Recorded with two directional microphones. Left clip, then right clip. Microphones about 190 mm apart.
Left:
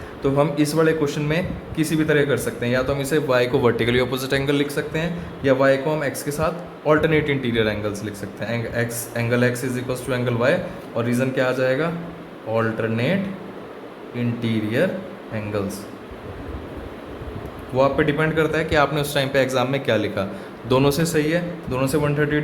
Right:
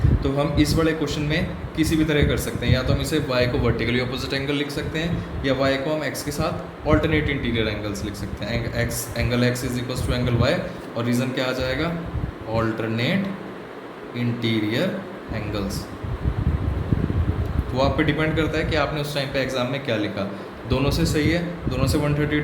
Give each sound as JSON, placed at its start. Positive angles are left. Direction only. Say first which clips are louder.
{"t": 0.2, "sound": "a man's voice", "louder": "left 4 dB", "side_deg": 45}
{"t": 14.2, "sound": "a man's voice", "louder": "right 1 dB", "side_deg": 40}
{"t": 17.7, "sound": "a man's voice", "louder": "left 3 dB", "side_deg": 35}